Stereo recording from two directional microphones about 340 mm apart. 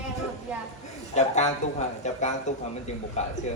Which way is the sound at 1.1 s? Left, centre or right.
Centre.